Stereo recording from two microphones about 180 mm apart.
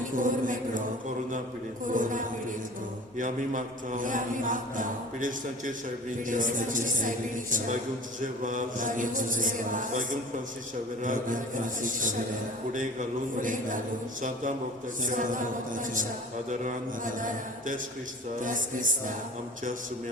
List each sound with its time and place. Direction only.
0.2 s mantra: 45° right (ahead or behind)
1.9 s mantra: 45° right (ahead or behind)
11.0 s mantra: 45° right (ahead or behind)
13.4 s mantra: 45° right (ahead or behind)